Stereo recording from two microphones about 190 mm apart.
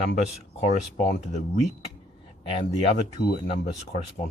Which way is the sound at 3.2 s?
60° left (ahead or behind).